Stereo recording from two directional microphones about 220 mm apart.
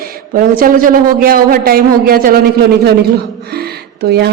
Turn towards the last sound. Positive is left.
turn(degrees=-45)  # may be behind; listen again after turning